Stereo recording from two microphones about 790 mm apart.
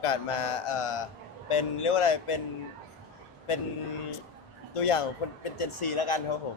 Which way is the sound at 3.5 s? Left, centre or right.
Left.